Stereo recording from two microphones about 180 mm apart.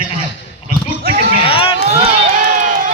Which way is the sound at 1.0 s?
55° right (ahead or behind).